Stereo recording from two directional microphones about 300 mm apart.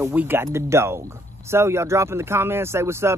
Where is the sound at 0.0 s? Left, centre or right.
Centre.